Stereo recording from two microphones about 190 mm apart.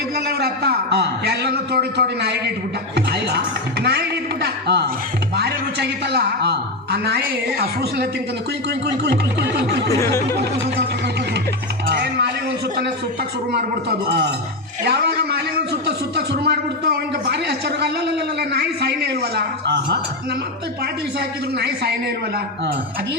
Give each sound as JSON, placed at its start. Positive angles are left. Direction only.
{"t": 0.3, "sound": "a man's voice", "side_deg": -55}
{"t": 3.8, "sound": "a sound", "side_deg": -60}
{"t": 7.6, "sound": "a man's voice", "side_deg": -55}
{"t": 9.0, "sound": "a man's voice", "side_deg": -60}
{"t": 9.9, "sound": "a sound", "side_deg": 15}
{"t": 11.9, "sound": "a man's voice", "side_deg": -60}
{"t": 14.1, "sound": "a man's voice", "side_deg": -65}
{"t": 21.2, "sound": "a man's voice", "side_deg": -60}